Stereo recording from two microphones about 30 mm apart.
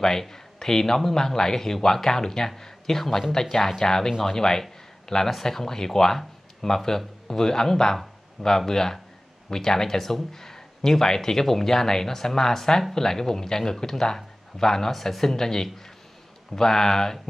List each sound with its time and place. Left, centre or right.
0.0 s speech: centre